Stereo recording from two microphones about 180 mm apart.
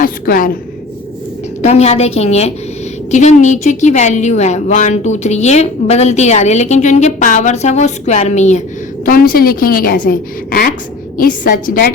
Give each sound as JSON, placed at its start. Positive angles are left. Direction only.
{"t": 0.0, "sound": "a woman's voice", "side_deg": 50}
{"t": 1.6, "sound": "a woman's voice", "side_deg": 35}
{"t": 9.0, "sound": "a woman's voice", "side_deg": 50}